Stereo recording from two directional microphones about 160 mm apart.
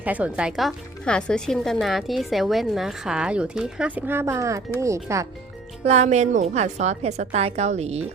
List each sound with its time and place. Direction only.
0.0 s speech: 10° right (ahead or behind)
5.8 s a woman's voice: 45° right (ahead or behind)